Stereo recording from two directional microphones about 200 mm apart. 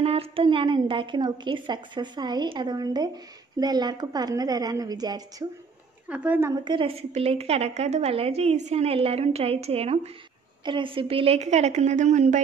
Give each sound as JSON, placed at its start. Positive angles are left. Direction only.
{"t": 0.0, "sound": "a woman's voice", "side_deg": -30}
{"t": 6.0, "sound": "a woman's voice", "side_deg": -5}
{"t": 6.6, "sound": "a woman's voice", "side_deg": -25}